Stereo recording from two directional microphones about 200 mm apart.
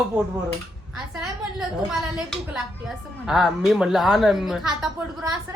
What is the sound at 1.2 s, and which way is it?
Speech, centre (ahead or behind).